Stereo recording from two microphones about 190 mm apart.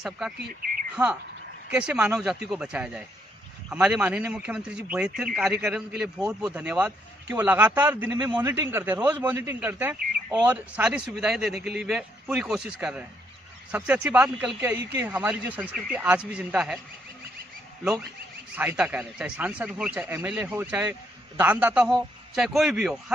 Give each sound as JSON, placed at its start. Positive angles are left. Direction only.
{"t": 0.4, "sound": "speech", "side_deg": -50}
{"t": 1.7, "sound": "a man's voice", "side_deg": -5}
{"t": 8.2, "sound": "a man's voice", "side_deg": -20}
{"t": 8.6, "sound": "a man's voice", "side_deg": -10}
{"t": 11.5, "sound": "speech", "side_deg": -55}
{"t": 11.8, "sound": "a man's voice", "side_deg": -5}
{"t": 18.5, "sound": "a man's voice", "side_deg": -10}